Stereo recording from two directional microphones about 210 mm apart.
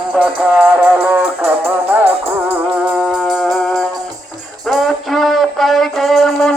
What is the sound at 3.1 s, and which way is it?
Music, centre (ahead or behind).